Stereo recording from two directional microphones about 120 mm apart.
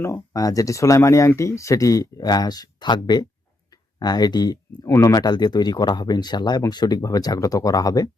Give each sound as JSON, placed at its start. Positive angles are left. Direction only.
{"t": 0.0, "sound": "speech", "side_deg": 25}